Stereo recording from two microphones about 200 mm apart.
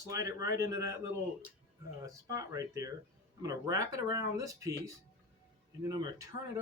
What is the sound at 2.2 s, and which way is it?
Speech, 15° right (ahead or behind).